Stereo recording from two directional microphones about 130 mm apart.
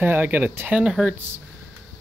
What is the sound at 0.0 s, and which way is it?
Speech, 15° right (ahead or behind).